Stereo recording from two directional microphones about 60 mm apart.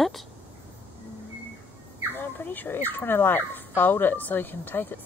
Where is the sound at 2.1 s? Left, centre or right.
Left.